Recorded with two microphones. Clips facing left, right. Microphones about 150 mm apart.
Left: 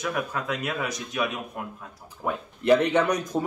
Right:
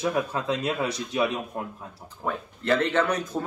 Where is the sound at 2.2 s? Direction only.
15° left (ahead or behind).